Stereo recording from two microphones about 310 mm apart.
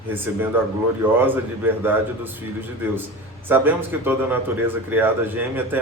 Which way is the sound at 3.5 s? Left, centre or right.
Centre.